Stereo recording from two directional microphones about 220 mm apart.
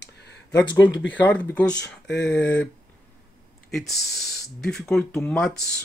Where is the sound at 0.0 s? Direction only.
50° left (ahead or behind).